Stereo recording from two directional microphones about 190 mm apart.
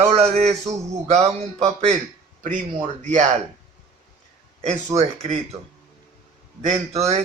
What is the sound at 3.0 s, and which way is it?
Speech, 40° right (ahead or behind).